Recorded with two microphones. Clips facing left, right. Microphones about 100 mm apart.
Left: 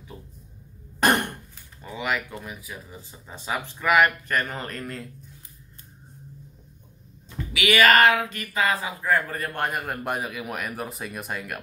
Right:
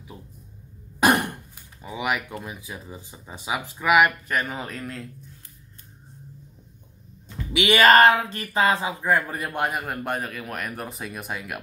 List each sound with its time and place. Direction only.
0.9 s speech: 5° right (ahead or behind)
7.5 s speech: 30° right (ahead or behind)
9.7 s speech: centre (ahead or behind)